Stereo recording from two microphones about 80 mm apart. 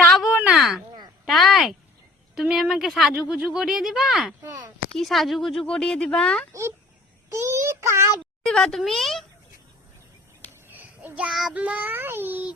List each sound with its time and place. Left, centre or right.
0.1 s a sound: centre
2.3 s speech: centre
4.4 s speech: right
4.9 s speech: centre
6.5 s child singing: right
8.4 s speech: centre
10.7 s a sound: right
11.3 s speech: centre
11.5 s a child's voice: centre